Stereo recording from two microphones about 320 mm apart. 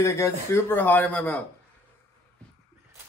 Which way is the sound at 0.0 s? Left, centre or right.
Centre.